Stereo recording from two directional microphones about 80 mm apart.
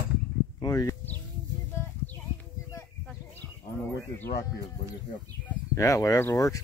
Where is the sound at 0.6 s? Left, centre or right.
Left.